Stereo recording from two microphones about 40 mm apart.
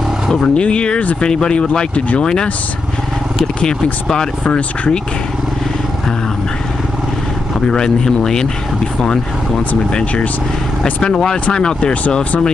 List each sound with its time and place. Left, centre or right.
0.3 s speech: left
3.6 s speech: centre
4.5 s speech: left
7.6 s speech: centre
10.8 s speech: centre
11.8 s speech: left